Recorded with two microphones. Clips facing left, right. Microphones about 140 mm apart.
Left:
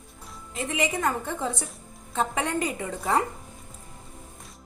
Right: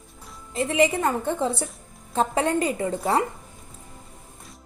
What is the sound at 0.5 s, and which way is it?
A woman's voice, 35° right (ahead or behind).